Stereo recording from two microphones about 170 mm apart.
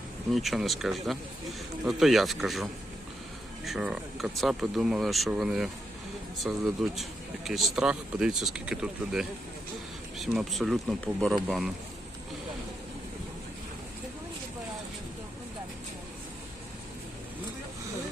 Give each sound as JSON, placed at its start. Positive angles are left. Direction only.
{"t": 0.3, "sound": "speech", "side_deg": 0}